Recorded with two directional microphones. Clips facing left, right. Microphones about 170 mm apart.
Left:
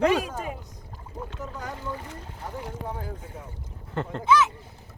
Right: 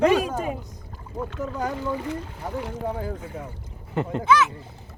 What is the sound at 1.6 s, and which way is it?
Speech, 90° right.